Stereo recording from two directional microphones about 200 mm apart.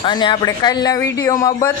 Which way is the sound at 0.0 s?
25° left (ahead or behind).